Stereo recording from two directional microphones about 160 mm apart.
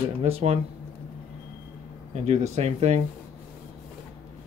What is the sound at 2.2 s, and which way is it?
Speech, 45° right (ahead or behind).